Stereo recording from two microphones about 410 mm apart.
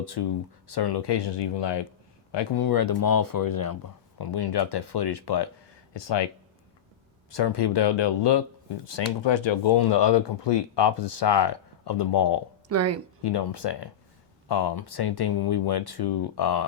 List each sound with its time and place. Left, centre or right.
0.0 s speech: left
2.3 s speech: left
4.2 s speech: left
5.9 s speech: left
7.3 s speech: left
12.6 s speech: right
13.2 s speech: left